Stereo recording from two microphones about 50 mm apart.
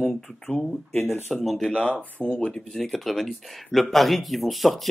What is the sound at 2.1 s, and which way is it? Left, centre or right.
Speech, left.